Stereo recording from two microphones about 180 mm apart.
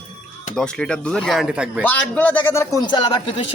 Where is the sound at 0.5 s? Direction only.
5° left (ahead or behind).